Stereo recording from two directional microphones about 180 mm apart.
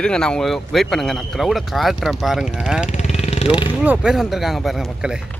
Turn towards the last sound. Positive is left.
turn(degrees=-5)  # may be behind; listen again after turning